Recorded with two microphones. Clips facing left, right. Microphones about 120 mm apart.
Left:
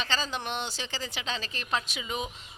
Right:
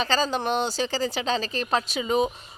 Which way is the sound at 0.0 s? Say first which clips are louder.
Right 8 dB; 40° right (ahead or behind).